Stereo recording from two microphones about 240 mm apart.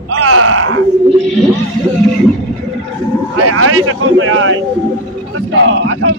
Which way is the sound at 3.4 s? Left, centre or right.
Right.